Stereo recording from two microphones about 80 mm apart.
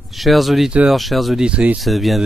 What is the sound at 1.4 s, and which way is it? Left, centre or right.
Speech, centre.